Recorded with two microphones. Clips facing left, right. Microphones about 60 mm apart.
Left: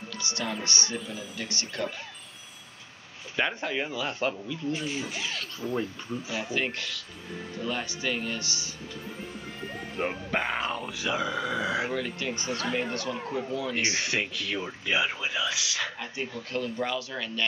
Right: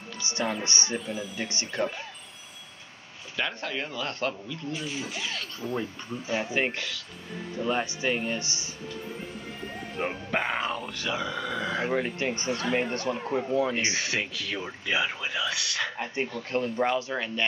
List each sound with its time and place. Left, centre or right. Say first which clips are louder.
0.2 s speech: right 3 dB; right
0.9 s speech: right 3 dB; centre
1.3 s speech: right 2 dB; right
3.3 s speech: left 3 dB; centre
6.4 s speech: right 2 dB; right
9.7 s speech: left 1 dB; centre
11.9 s speech: right 3 dB; right
13.9 s speech: even; centre
16.5 s speech: right 4 dB; right